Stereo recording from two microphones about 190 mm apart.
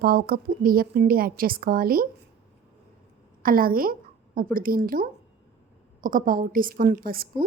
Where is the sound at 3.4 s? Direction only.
50° right (ahead or behind).